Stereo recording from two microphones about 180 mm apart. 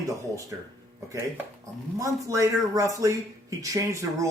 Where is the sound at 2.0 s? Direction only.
15° right (ahead or behind).